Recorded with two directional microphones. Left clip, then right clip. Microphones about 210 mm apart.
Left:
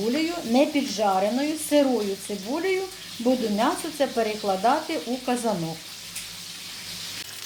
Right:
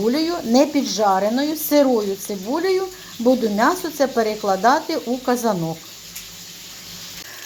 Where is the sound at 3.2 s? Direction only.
25° right (ahead or behind).